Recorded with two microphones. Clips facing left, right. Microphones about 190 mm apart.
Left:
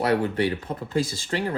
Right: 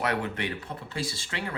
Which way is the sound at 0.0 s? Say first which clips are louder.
Left 7 dB; 35° left (ahead or behind).